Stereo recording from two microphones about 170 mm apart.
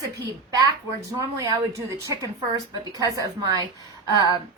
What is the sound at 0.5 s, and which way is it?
Speech, 20° right (ahead or behind).